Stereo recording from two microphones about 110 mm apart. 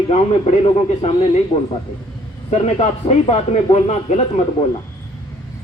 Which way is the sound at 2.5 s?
70° left (ahead or behind).